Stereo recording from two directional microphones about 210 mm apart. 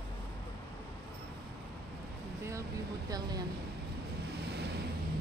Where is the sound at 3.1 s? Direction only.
20° right (ahead or behind).